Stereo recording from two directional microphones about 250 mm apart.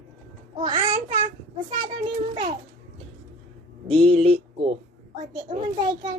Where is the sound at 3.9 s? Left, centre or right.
Right.